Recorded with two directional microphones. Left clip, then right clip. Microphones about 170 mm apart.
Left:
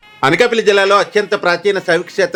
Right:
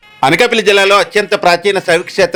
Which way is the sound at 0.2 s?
35° right (ahead or behind).